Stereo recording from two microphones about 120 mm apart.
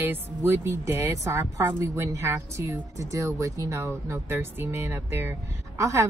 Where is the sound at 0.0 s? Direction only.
20° right (ahead or behind).